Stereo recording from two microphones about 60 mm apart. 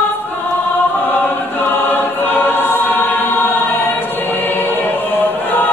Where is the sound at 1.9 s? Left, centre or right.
Left.